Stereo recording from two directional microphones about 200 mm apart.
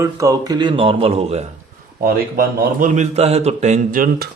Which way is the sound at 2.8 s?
35° right (ahead or behind).